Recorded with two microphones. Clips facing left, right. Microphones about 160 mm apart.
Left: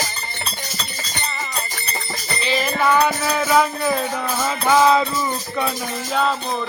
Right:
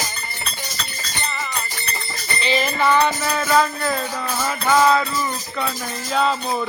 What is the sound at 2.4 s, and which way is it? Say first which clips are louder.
Music: even; centre (ahead or behind).